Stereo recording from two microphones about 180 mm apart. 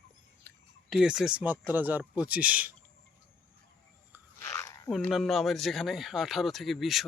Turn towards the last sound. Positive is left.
turn(degrees=0)  # may be behind; listen again after turning